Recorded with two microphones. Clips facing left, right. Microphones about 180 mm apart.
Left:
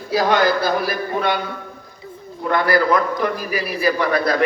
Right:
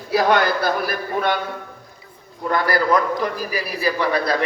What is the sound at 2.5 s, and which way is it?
A man's voice, 40° right (ahead or behind).